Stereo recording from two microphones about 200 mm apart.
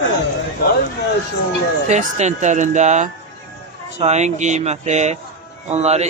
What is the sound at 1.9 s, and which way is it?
A man's voice, 35° right (ahead or behind).